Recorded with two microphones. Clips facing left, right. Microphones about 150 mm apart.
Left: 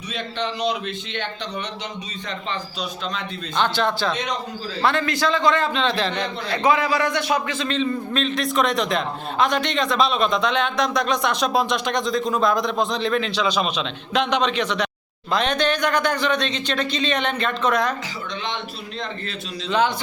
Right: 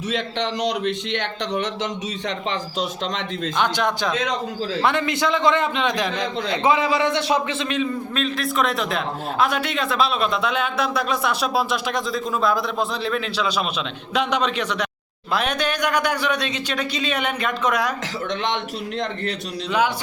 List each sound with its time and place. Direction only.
0.1 s a man's voice: 85° right
3.6 s speech: 15° right (ahead or behind)
6.5 s a man's voice: 20° right (ahead or behind)
7.7 s a man's voice: 5° right (ahead or behind)
18.4 s a man's voice: 80° right